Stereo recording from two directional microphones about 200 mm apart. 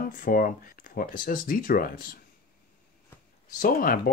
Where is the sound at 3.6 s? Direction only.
45° left (ahead or behind).